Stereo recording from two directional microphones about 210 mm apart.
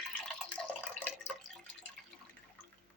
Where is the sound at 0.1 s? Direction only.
5° left (ahead or behind).